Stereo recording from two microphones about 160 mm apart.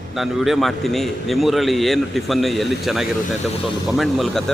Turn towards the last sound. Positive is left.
turn(degrees=0)  # may be behind; listen again after turning